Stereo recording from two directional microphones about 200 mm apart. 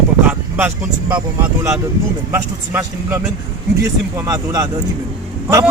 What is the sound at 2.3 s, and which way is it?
Speech, 10° right (ahead or behind).